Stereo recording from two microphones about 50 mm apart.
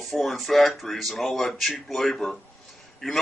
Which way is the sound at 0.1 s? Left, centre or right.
Centre.